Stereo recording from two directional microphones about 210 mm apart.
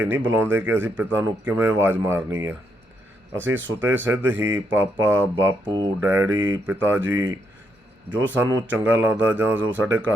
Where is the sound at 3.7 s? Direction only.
10° right (ahead or behind).